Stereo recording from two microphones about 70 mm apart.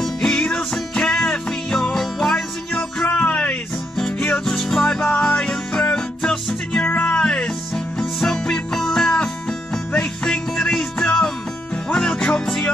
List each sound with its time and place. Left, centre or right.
0.0 s music: centre
3.1 s music: centre
4.5 s music: centre
6.8 s music: left
7.7 s music: centre